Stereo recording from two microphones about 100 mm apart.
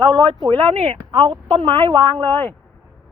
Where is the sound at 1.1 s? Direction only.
50° right (ahead or behind).